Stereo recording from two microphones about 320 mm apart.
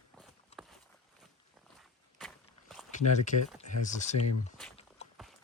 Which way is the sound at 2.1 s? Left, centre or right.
Centre.